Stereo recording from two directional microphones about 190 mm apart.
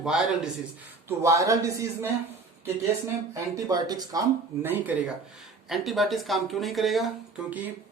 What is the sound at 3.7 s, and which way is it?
Speech, 20° right (ahead or behind).